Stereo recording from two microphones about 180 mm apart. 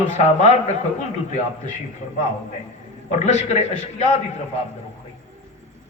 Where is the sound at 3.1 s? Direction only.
40° left (ahead or behind).